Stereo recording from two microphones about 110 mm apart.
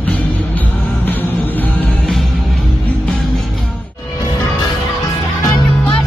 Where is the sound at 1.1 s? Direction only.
15° left (ahead or behind).